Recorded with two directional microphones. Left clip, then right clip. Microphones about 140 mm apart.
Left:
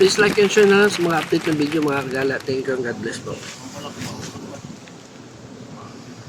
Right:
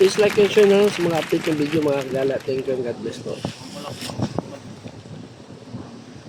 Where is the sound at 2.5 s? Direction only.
15° left (ahead or behind).